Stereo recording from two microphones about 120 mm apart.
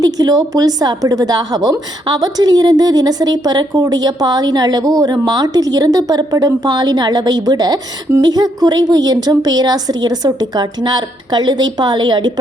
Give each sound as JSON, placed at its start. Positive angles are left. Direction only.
{"t": 0.0, "sound": "a woman's voice", "side_deg": -30}